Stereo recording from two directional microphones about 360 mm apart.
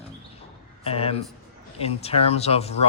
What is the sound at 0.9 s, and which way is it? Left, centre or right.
A man's voice, centre.